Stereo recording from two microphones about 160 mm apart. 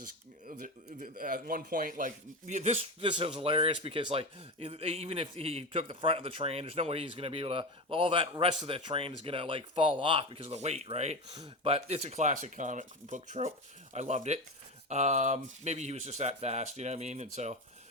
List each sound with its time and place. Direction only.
0.0 s a sound: 60° right (ahead or behind)
0.9 s speech: 55° right (ahead or behind)
11.3 s speech: 30° right (ahead or behind)